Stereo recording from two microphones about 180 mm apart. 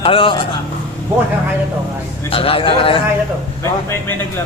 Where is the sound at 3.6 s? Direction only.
15° left (ahead or behind).